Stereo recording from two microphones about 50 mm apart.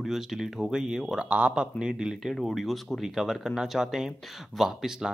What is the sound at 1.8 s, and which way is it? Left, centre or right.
Speech, centre.